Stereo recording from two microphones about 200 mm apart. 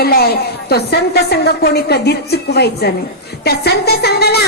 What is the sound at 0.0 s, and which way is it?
A woman's voice, 50° left (ahead or behind).